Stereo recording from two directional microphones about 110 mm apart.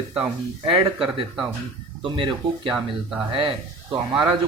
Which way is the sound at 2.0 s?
45° right (ahead or behind).